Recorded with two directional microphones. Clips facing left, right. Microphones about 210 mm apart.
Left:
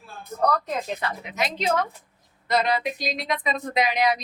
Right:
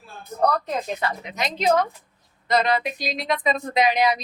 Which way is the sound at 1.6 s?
35° right (ahead or behind).